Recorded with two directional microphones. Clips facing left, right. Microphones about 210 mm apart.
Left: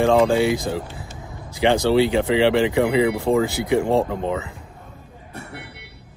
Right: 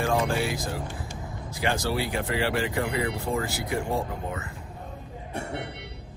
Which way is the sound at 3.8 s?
90° left.